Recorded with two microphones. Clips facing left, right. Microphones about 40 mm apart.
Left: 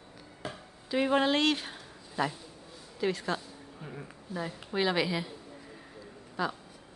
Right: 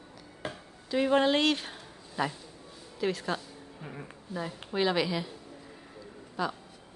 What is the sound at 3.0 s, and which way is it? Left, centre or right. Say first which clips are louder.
A woman's voice: even; centre.